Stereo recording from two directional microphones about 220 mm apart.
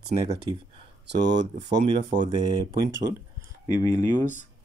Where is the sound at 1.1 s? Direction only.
50° right (ahead or behind).